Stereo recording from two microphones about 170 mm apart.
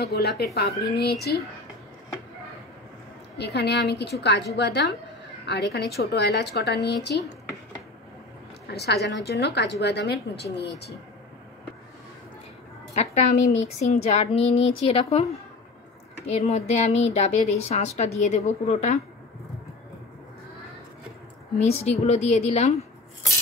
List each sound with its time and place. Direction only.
0.0 s a woman's voice: 70° left (ahead or behind)
3.3 s a woman's voice: 75° left (ahead or behind)
8.6 s a woman's voice: 75° left (ahead or behind)
12.9 s a woman's voice: 40° left (ahead or behind)
16.3 s a woman's voice: 40° left (ahead or behind)
21.5 s a woman's voice: 40° left (ahead or behind)